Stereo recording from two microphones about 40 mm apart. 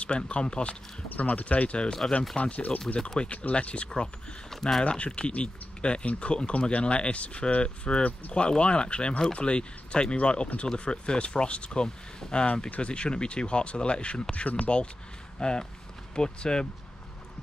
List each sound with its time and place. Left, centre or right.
0.0 s speech: left
1.0 s speech: left
4.5 s a sound: centre
4.8 s speech: left
14.3 s speech: left
15.3 s speech: left